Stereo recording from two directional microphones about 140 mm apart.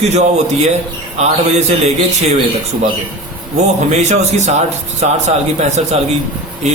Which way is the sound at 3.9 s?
55° right (ahead or behind).